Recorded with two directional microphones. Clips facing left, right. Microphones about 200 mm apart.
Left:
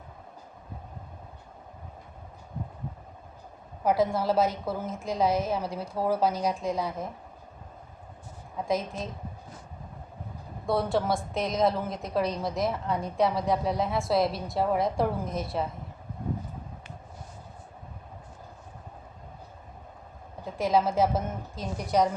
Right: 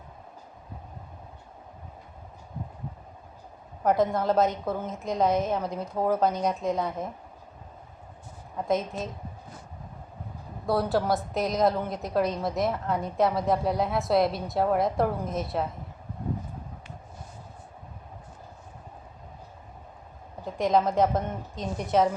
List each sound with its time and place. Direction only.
3.8 s a woman's voice: 5° left (ahead or behind)
5.8 s speech: 15° right (ahead or behind)
6.1 s a woman's voice: 5° left (ahead or behind)
8.5 s a woman's voice: centre (ahead or behind)
10.7 s a woman's voice: centre (ahead or behind)
20.4 s a woman's voice: 5° left (ahead or behind)